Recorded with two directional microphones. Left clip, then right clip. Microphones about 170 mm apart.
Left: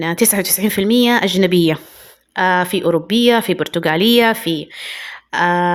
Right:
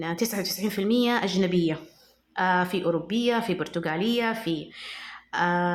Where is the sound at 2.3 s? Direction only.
35° left (ahead or behind).